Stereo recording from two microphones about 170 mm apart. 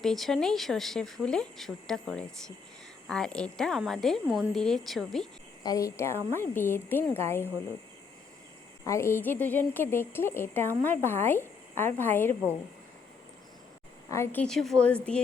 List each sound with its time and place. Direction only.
0.0 s speech: centre (ahead or behind)
5.6 s a woman's voice: 20° left (ahead or behind)
8.8 s a woman's voice: 15° left (ahead or behind)
14.1 s a woman's voice: 15° left (ahead or behind)
14.4 s speech: centre (ahead or behind)